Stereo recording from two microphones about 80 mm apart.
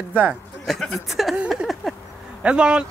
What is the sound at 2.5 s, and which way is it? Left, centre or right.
Speech, centre.